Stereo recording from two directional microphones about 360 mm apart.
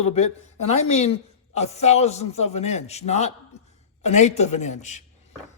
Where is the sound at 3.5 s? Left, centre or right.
Centre.